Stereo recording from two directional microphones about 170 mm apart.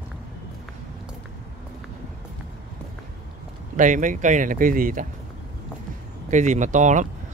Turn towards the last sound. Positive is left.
turn(degrees=-45)  # may be behind; listen again after turning